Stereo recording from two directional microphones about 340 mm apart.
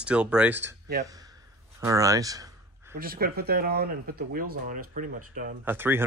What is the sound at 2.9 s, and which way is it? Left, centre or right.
Speech, right.